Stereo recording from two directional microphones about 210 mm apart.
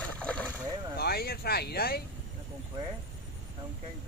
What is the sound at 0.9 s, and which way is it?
Speech, 50° left (ahead or behind).